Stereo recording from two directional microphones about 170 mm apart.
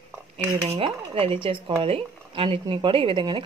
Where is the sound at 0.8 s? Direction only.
35° right (ahead or behind).